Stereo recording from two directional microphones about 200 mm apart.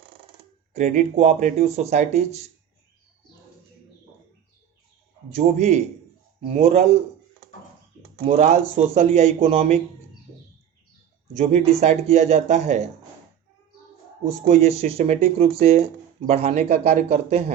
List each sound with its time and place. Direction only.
0.7 s speech: 35° right (ahead or behind)
5.3 s speech: 35° right (ahead or behind)
8.2 s speech: 35° right (ahead or behind)
11.8 s speech: 35° right (ahead or behind)
14.4 s speech: 30° right (ahead or behind)